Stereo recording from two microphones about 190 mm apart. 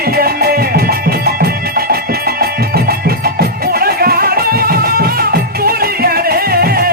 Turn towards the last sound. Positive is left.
turn(degrees=-50)  # may be behind; listen again after turning